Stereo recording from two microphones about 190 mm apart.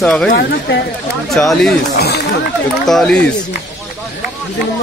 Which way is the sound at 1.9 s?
60° left (ahead or behind).